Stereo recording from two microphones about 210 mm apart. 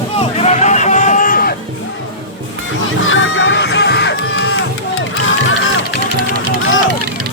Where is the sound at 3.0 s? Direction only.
70° left (ahead or behind); by 4.5 s 55° left (ahead or behind).